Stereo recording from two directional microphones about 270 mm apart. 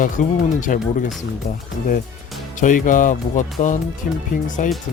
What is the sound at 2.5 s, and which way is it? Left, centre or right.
Speech, left.